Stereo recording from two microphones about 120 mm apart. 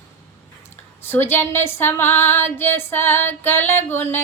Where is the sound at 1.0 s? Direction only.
20° left (ahead or behind).